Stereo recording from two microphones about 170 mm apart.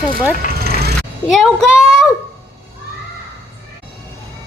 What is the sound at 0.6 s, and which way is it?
Music, 70° right (ahead or behind).